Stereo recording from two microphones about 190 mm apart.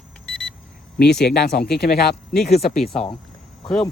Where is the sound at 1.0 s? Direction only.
5° left (ahead or behind).